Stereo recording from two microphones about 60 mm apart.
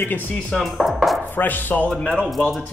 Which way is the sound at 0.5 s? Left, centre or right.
Centre.